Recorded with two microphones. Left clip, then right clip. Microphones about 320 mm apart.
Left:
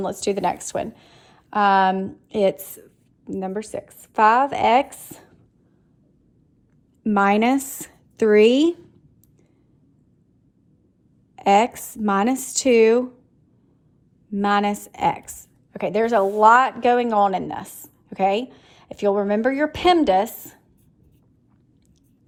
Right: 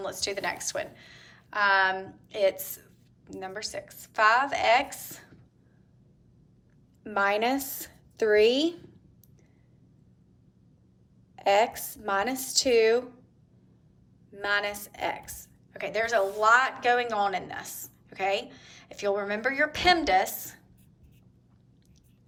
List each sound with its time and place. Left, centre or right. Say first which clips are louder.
0.0 s a woman's voice: left 9 dB; centre
7.1 s a woman's voice: left 7 dB; centre
11.3 s a woman's voice: left 6 dB; centre
14.4 s a woman's voice: left 8 dB; centre